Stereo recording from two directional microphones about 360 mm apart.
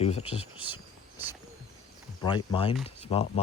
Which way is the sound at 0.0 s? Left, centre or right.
Centre.